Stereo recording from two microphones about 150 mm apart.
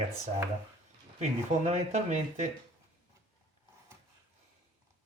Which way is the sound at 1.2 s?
45° right (ahead or behind).